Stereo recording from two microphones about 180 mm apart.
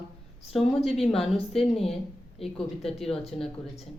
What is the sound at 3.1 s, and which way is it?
Speech, 35° left (ahead or behind).